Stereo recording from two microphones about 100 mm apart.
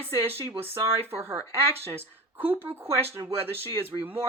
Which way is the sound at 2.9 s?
75° right (ahead or behind).